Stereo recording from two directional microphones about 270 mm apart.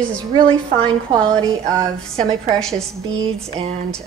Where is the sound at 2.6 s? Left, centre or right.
Centre.